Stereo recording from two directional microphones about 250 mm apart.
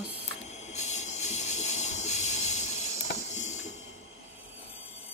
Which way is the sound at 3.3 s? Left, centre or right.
Left.